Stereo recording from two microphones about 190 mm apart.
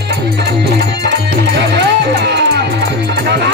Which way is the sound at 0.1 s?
65° right (ahead or behind).